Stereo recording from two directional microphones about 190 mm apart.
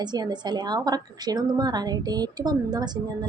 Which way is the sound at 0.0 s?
20° right (ahead or behind).